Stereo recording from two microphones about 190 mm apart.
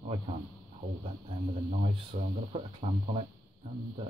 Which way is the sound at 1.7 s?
35° right (ahead or behind).